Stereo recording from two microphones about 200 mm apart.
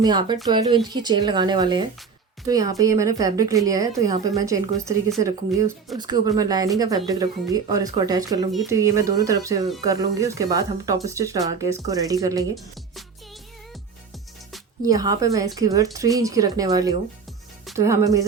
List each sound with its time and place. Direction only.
0.0 s a woman's voice: 20° right (ahead or behind)
14.8 s a woman's voice: 15° right (ahead or behind)